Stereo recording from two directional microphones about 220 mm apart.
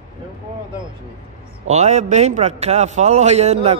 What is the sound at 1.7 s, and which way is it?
A man's voice, 30° right (ahead or behind).